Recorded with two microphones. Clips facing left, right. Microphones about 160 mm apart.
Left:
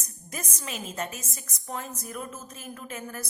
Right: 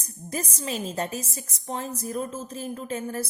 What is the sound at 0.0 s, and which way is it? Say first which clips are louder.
A woman's voice: right 7 dB; 30° right (ahead or behind).